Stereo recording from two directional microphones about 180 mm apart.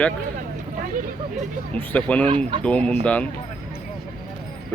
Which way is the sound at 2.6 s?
5° left (ahead or behind).